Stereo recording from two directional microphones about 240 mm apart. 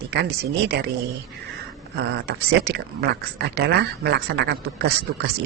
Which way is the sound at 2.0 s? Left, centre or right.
Right.